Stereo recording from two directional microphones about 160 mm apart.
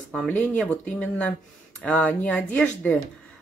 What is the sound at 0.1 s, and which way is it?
Speech, 5° left (ahead or behind).